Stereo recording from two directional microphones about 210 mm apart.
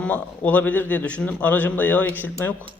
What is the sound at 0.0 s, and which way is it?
A man's voice, 5° left (ahead or behind).